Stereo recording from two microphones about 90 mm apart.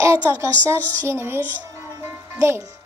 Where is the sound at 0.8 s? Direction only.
20° left (ahead or behind).